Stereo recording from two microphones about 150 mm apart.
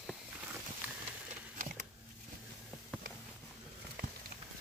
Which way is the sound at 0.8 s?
10° right (ahead or behind).